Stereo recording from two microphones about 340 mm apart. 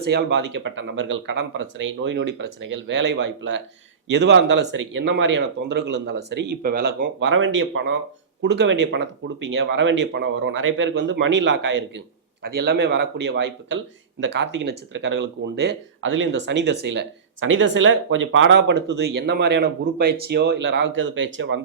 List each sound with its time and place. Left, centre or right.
0.0 s speech: right